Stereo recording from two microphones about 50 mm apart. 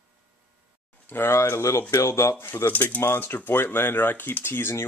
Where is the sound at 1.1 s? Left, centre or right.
Left.